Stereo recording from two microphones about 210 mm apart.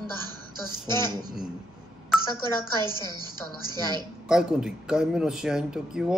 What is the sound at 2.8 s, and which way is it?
A woman's voice, 20° right (ahead or behind).